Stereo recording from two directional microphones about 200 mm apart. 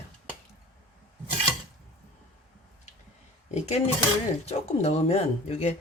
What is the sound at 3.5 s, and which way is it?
Speech, 35° left (ahead or behind).